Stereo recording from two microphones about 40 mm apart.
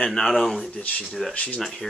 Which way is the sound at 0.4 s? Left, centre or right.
Centre.